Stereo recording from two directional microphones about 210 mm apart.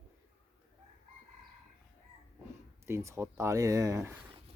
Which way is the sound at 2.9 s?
15° right (ahead or behind).